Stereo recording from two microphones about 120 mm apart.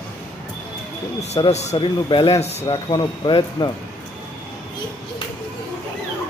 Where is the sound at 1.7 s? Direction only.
45° left (ahead or behind); by 2.7 s 60° left (ahead or behind).